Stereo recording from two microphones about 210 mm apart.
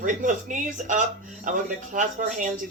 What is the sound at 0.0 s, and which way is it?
A woman's voice, 40° right (ahead or behind).